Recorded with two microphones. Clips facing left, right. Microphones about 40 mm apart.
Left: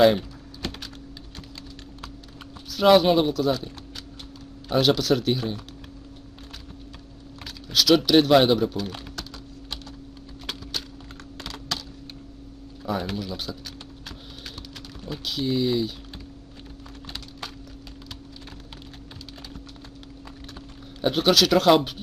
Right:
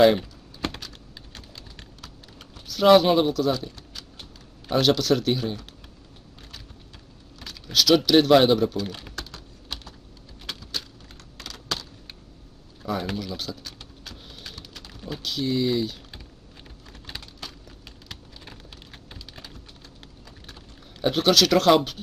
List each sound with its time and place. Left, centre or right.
2.6 s speech: centre
4.7 s speech: centre
7.7 s speech: centre
10.4 s wood: left
11.3 s computer keyboard: left
12.8 s a sound: centre
13.1 s typing: centre
15.0 s speech: centre
21.0 s speech: centre